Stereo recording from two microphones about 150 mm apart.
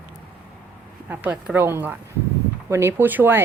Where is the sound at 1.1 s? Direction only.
10° right (ahead or behind).